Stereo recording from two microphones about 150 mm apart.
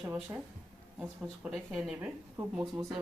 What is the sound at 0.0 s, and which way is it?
Speech, 15° right (ahead or behind).